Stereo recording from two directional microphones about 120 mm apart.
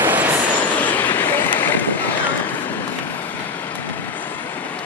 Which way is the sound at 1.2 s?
15° left (ahead or behind).